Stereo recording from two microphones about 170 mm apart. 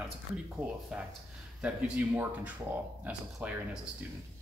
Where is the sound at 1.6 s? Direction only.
10° right (ahead or behind).